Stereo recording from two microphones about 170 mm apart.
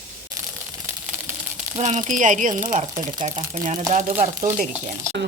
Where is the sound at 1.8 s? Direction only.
45° right (ahead or behind).